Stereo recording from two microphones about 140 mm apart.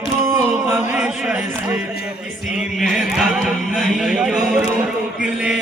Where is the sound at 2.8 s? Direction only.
Centre (ahead or behind).